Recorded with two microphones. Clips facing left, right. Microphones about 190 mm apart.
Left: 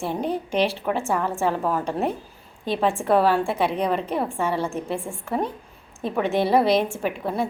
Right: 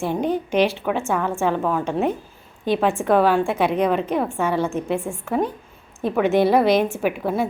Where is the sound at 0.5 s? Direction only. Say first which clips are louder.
Right 3 dB; 30° left (ahead or behind).